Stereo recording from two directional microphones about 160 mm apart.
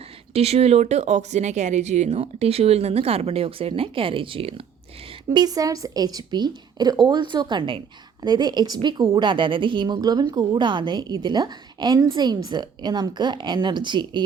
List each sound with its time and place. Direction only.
0.3 s speech: 40° right (ahead or behind)
5.3 s a woman's voice: 25° right (ahead or behind)